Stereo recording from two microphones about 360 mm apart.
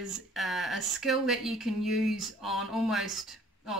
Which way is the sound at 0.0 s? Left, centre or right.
Centre.